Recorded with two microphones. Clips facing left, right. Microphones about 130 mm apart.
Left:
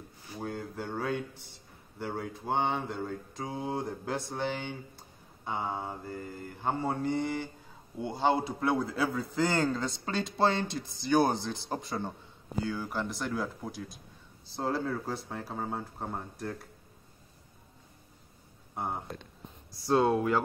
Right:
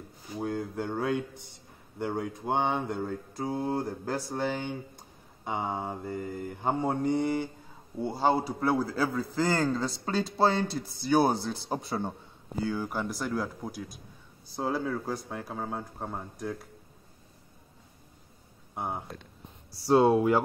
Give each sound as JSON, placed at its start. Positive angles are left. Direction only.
{"t": 0.4, "sound": "a man's voice", "side_deg": -10}
{"t": 19.7, "sound": "speech", "side_deg": -10}